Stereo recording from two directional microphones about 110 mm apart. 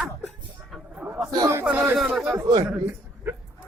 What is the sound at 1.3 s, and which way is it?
Speech, 35° right (ahead or behind).